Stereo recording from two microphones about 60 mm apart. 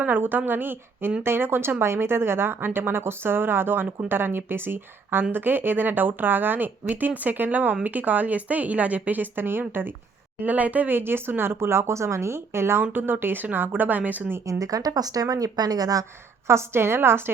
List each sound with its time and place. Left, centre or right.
0.0 s a woman's voice: right
10.4 s speech: right
12.8 s speech: right
14.4 s a woman's voice: right
16.5 s speech: right